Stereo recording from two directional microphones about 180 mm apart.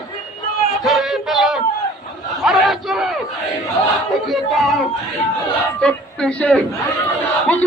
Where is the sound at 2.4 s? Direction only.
Centre (ahead or behind).